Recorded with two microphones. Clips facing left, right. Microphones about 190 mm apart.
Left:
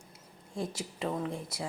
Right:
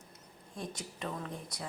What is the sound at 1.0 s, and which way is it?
Speech, 25° left (ahead or behind).